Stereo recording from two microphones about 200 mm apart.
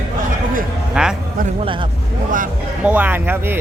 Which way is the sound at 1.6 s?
25° right (ahead or behind).